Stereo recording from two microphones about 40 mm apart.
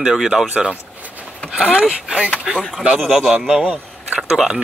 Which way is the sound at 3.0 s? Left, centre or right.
Centre.